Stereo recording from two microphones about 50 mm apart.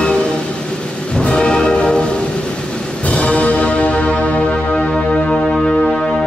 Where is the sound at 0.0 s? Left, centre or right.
Centre.